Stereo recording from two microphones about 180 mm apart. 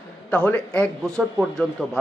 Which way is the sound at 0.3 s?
5° left (ahead or behind).